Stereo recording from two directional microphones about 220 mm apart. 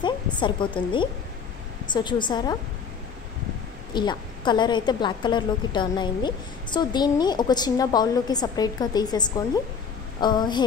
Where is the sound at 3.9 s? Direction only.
20° left (ahead or behind).